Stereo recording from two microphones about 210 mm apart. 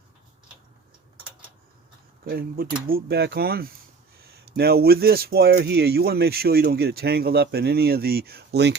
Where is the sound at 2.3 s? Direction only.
45° right (ahead or behind).